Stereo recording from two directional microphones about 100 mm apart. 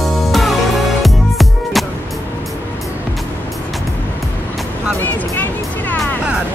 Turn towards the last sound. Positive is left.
turn(degrees=20)  # may be behind; listen again after turning